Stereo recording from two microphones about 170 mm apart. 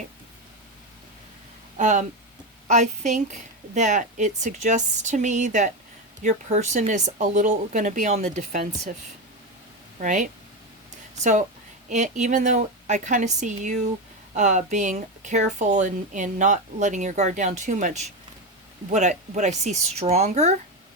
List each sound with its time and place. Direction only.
1.8 s a woman's voice: 45° right (ahead or behind)
10.0 s a woman's voice: 45° right (ahead or behind)